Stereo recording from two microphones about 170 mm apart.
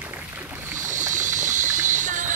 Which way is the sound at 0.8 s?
50° right (ahead or behind).